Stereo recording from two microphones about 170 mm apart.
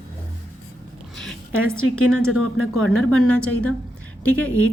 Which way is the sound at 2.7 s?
5° left (ahead or behind).